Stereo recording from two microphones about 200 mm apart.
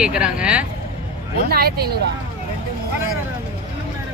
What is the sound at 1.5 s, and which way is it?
Speech, 50° right (ahead or behind).